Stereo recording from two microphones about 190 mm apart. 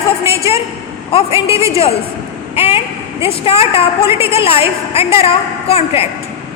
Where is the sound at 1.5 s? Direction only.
15° right (ahead or behind).